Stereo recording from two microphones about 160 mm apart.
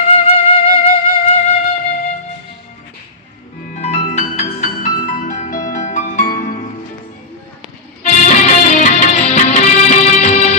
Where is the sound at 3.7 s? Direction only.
45° left (ahead or behind).